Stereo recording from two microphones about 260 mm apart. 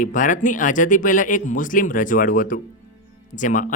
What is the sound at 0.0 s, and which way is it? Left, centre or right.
Speech, left.